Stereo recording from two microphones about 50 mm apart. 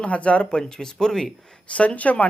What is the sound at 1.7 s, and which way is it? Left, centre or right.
Speech, left.